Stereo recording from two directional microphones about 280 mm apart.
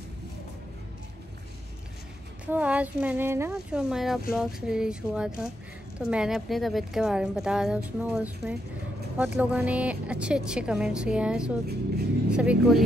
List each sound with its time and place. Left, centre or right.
2.4 s a woman's voice: centre